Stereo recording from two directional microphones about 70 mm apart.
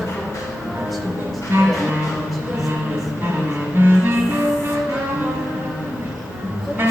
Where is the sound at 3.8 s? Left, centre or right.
Right.